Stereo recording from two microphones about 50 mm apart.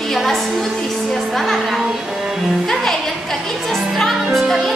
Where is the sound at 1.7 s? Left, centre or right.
Centre.